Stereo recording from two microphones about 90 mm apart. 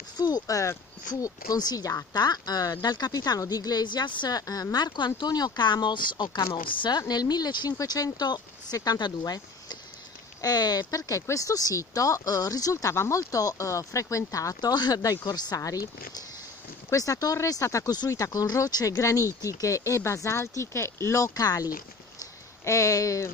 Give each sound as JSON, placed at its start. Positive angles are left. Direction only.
{"t": 0.2, "sound": "speech", "side_deg": 45}
{"t": 6.5, "sound": "speech", "side_deg": 65}
{"t": 7.0, "sound": "speech", "side_deg": 50}